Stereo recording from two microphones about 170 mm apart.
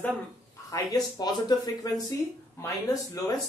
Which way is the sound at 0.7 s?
20° left (ahead or behind).